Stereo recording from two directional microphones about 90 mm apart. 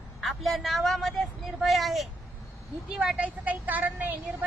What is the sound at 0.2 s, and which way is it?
A woman's voice, centre (ahead or behind).